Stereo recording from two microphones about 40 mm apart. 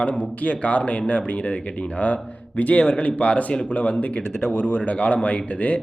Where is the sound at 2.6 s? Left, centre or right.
Left.